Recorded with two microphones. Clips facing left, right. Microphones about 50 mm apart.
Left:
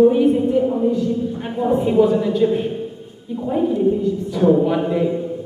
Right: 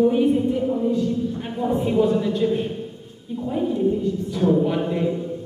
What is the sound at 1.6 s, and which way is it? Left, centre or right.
A man's voice, centre.